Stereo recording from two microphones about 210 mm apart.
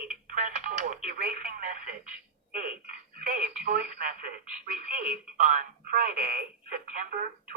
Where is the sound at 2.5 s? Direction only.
40° right (ahead or behind).